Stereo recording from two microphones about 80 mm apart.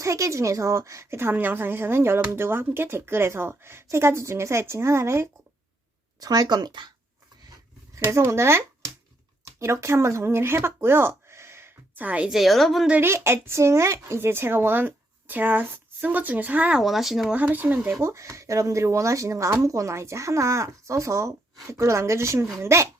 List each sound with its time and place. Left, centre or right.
0.0 s speech: right
1.2 s speech: right
6.1 s speech: right
7.9 s speech: right
11.9 s speech: centre
12.3 s a woman's voice: centre
13.0 s speech: right; by 16.8 s centre
16.8 s a woman's voice: centre
17.3 s speech: right
18.0 s speech: right